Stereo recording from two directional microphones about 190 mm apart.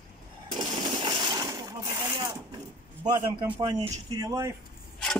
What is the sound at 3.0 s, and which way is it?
A man's voice, 20° right (ahead or behind).